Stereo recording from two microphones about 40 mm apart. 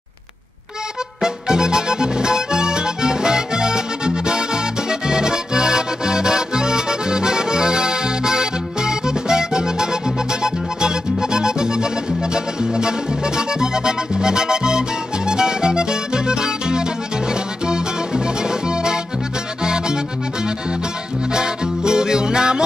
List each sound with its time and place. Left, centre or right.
1.2 s music: centre
21.3 s music: centre